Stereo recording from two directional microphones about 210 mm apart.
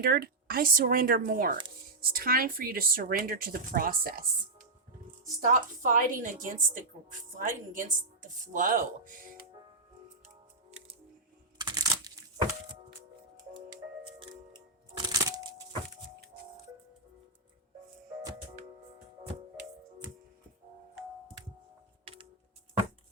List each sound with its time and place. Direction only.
0.0 s speech: 50° right (ahead or behind)
5.4 s a woman's voice: 40° right (ahead or behind)
10.7 s music: 30° right (ahead or behind)
11.5 s a sound: 20° right (ahead or behind)
14.2 s music: 20° right (ahead or behind)